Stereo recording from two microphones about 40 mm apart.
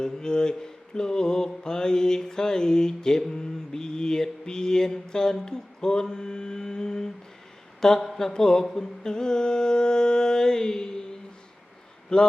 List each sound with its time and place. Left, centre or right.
0.0 s mantra: centre
7.8 s speech: centre
8.3 s mantra: centre
12.1 s speech: centre